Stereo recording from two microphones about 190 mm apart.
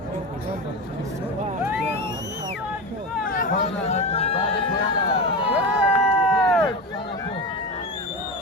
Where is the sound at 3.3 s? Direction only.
45° left (ahead or behind); by 4.8 s 30° left (ahead or behind).